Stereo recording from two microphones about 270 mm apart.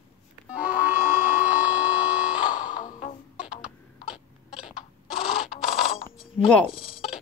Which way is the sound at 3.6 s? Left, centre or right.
Centre.